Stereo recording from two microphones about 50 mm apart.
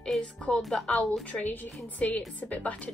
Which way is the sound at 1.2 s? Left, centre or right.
Left.